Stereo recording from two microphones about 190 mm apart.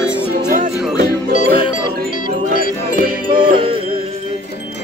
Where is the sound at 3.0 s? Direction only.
50° right (ahead or behind).